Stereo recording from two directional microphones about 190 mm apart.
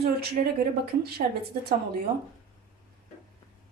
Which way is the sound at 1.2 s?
35° right (ahead or behind).